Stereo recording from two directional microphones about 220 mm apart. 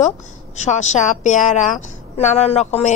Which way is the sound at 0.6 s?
30° left (ahead or behind).